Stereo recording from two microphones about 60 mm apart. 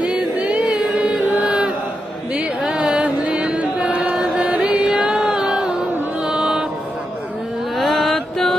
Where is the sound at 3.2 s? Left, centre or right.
Right.